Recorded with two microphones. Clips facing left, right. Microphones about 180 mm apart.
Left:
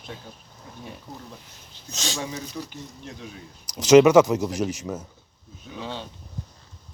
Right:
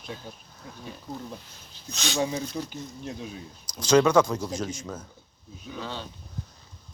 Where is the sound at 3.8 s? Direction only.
20° left (ahead or behind).